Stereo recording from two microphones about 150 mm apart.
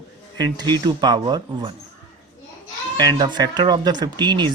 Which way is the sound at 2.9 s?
30° right (ahead or behind).